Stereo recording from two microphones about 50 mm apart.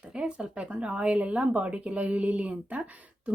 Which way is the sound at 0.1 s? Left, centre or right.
Right.